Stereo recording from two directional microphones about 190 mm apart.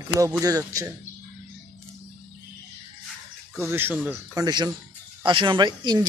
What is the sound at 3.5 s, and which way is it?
Speech, 10° right (ahead or behind).